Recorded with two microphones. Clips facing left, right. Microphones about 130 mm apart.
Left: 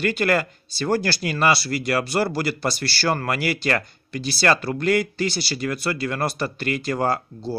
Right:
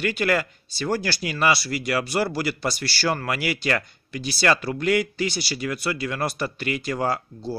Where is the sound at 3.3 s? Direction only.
45° left (ahead or behind).